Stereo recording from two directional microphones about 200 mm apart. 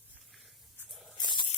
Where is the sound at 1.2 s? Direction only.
25° left (ahead or behind).